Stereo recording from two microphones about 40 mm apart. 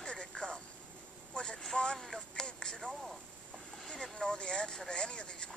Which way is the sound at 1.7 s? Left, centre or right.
Left.